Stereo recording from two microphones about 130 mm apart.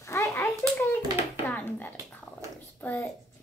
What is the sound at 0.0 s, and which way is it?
Hands, 20° left (ahead or behind).